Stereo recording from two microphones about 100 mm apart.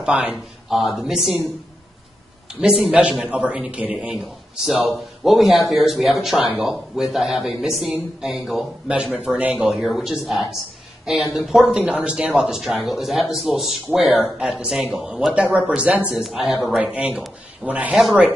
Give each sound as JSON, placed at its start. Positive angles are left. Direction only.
{"t": 0.0, "sound": "speech", "side_deg": -10}
{"t": 2.6, "sound": "speech", "side_deg": -5}